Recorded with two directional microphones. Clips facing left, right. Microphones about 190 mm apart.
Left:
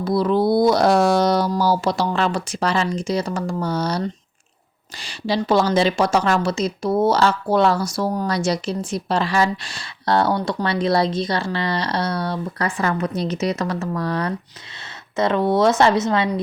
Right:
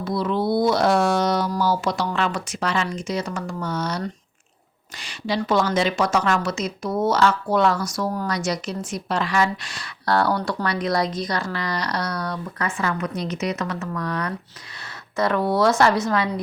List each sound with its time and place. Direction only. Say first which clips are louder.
0.0 s a woman's voice: left 5 dB; 35° left (ahead or behind)